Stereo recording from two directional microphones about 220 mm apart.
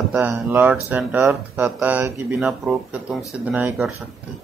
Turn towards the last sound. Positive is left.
turn(degrees=-10)  # may be behind; listen again after turning